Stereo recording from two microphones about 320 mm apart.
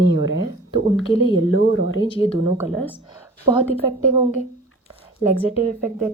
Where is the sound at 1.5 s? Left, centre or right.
Left.